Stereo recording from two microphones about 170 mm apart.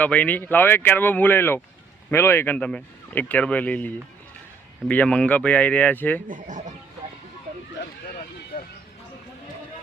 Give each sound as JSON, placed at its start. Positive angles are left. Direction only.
{"t": 0.0, "sound": "speech", "side_deg": 10}
{"t": 6.2, "sound": "speech", "side_deg": -50}
{"t": 8.5, "sound": "a sound", "side_deg": 55}